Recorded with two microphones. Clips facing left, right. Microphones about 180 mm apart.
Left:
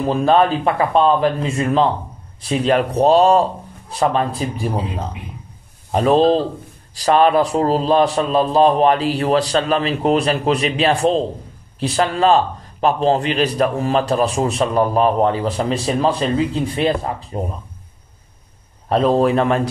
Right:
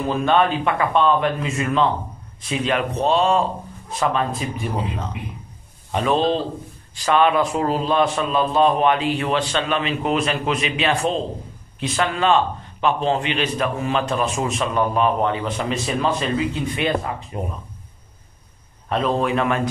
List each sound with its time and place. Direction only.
0.0 s a man's voice: 35° left (ahead or behind)
5.9 s a man's voice: 35° left (ahead or behind)
18.9 s a man's voice: 35° left (ahead or behind)